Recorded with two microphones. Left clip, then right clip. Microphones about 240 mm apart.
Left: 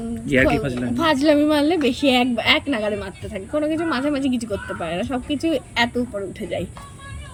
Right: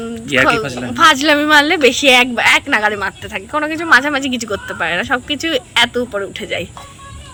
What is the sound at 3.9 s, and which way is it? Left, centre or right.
Speech, right.